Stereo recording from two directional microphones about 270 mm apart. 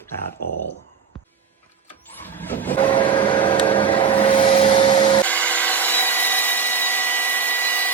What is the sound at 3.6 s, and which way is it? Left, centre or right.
Vacuum cleaner, centre.